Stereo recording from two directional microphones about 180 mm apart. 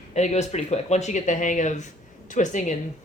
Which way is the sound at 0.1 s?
40° left (ahead or behind).